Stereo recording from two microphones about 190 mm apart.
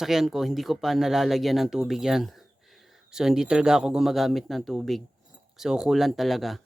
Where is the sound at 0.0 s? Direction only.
Centre (ahead or behind).